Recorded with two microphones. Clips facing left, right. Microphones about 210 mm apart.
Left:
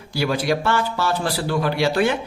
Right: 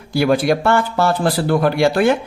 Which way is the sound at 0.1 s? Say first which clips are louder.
Right 6 dB; 55° right (ahead or behind).